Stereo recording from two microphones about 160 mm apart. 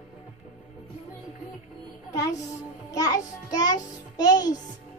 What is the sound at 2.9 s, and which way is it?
A child's voice, 20° left (ahead or behind).